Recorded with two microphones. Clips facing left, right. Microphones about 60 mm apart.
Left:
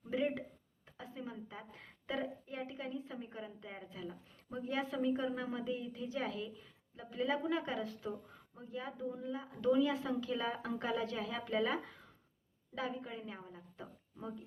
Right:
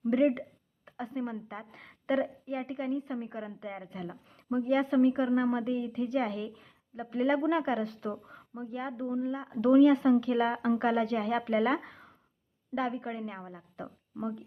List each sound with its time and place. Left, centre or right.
0.0 s a woman's voice: right